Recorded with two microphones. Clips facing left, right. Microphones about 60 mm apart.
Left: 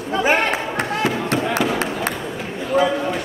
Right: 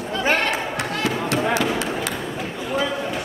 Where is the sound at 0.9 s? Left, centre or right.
Left.